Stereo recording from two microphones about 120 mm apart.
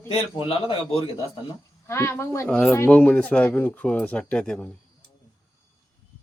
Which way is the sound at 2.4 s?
10° left (ahead or behind).